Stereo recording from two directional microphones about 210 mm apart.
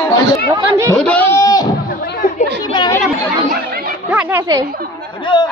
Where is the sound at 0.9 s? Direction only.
5° left (ahead or behind).